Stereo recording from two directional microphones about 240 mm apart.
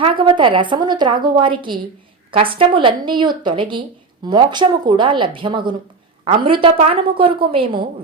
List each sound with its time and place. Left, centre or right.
0.0 s a woman's voice: right